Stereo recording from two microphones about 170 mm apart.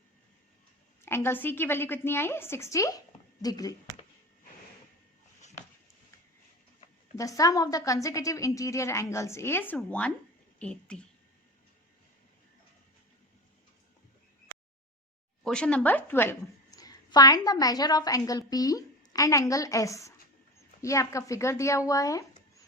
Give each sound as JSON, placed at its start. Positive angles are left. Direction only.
{"t": 1.0, "sound": "a woman's voice", "side_deg": 15}
{"t": 7.2, "sound": "a woman's voice", "side_deg": 20}
{"t": 15.4, "sound": "a woman's voice", "side_deg": 5}